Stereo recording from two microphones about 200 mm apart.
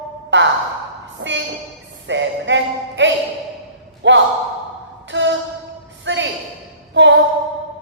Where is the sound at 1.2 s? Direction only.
65° right (ahead or behind).